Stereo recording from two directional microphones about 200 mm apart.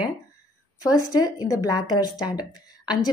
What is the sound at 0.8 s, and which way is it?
A woman's voice, 20° left (ahead or behind).